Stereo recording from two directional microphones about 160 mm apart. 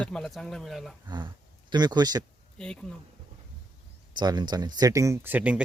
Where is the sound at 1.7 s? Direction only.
25° right (ahead or behind).